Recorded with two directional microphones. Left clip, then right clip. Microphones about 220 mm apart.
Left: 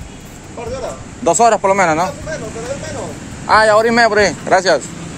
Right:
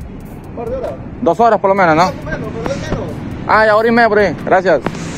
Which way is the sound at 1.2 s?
5° left (ahead or behind).